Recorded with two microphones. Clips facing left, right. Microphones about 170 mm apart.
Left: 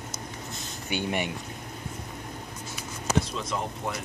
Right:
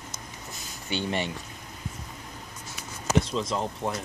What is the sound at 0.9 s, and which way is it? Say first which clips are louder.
Speech: even; 15° left (ahead or behind).